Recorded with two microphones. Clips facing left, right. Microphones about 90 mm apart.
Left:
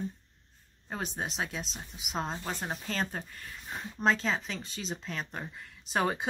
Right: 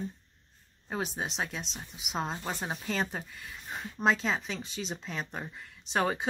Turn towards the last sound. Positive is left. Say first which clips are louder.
# even
turn(degrees=0)  # may be behind; listen again after turning